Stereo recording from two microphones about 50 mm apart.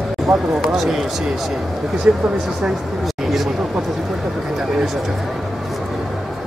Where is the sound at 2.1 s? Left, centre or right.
Right.